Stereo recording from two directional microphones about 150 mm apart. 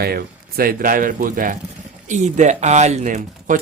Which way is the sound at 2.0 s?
55° right (ahead or behind).